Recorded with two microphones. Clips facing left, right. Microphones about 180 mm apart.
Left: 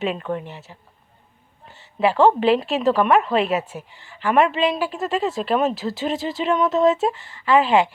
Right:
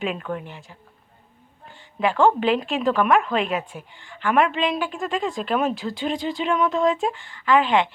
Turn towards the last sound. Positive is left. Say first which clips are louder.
# left 2 dB
turn(degrees=5)  # may be behind; listen again after turning